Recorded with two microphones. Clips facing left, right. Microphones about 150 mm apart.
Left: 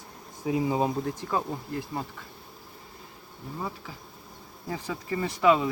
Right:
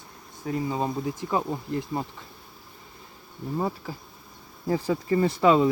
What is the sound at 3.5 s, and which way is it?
Speech, 35° right (ahead or behind).